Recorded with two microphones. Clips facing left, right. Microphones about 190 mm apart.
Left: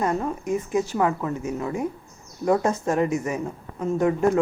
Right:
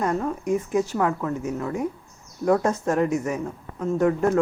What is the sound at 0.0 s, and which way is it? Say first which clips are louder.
Speech: even; 5° left (ahead or behind).